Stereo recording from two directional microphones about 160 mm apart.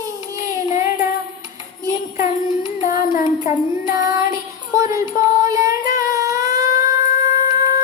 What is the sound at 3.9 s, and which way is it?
Child singing, 20° right (ahead or behind).